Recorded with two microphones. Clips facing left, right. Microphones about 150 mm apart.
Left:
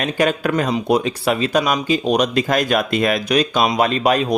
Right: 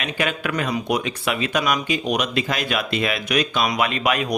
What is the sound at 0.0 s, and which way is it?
Speech, 40° left (ahead or behind).